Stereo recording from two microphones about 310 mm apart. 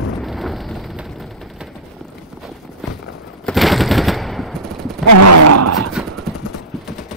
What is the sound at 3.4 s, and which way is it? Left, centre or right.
Machine gun, centre.